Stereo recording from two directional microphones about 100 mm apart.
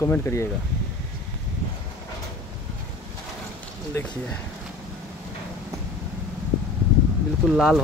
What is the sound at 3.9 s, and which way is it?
Speech, 25° left (ahead or behind).